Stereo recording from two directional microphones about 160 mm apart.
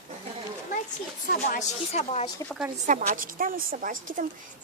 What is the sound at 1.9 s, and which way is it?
Speech, 40° left (ahead or behind).